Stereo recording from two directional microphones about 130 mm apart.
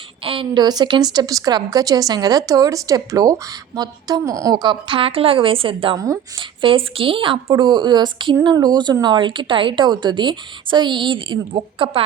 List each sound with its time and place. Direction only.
0.3 s a woman's voice: 40° right (ahead or behind)